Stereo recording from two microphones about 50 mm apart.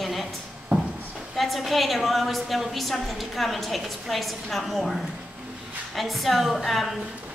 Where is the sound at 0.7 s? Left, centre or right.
Right.